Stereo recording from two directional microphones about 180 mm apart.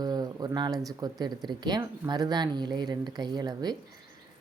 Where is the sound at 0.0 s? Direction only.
20° right (ahead or behind).